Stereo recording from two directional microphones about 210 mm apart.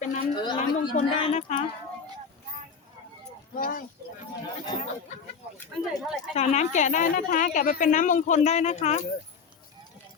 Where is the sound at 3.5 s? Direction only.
40° left (ahead or behind).